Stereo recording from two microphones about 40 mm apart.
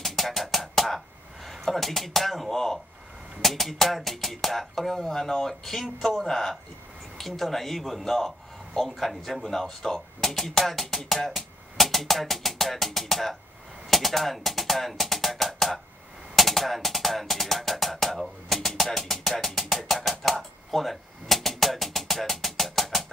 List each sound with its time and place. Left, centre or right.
0.0 s music: centre
3.4 s speech: centre
13.8 s music: centre